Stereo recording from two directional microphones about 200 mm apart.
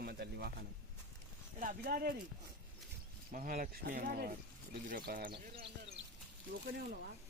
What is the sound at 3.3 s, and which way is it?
Speech, 40° right (ahead or behind).